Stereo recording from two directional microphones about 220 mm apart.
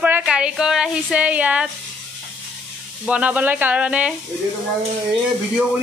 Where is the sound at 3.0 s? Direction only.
5° right (ahead or behind).